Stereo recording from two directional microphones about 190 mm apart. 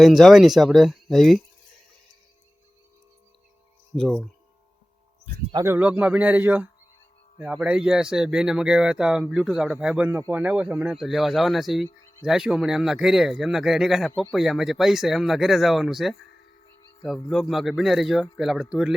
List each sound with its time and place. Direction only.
0.0 s speech: centre (ahead or behind)
3.9 s speech: 5° left (ahead or behind)
5.2 s speech: 30° right (ahead or behind)
5.6 s a man's voice: 10° right (ahead or behind)